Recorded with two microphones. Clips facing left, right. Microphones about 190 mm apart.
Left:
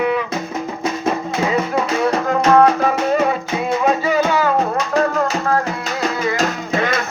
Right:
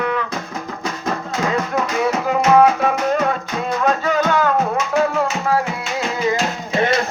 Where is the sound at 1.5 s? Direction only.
5° left (ahead or behind).